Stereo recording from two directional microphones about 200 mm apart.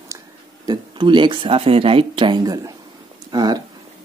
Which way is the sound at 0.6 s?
20° right (ahead or behind).